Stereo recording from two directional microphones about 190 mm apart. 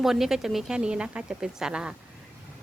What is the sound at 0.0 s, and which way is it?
Speech, centre (ahead or behind).